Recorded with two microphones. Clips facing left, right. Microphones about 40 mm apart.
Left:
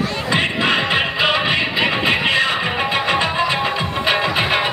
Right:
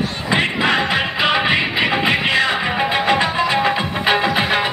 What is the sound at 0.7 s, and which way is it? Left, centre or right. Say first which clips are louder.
Music: even; left.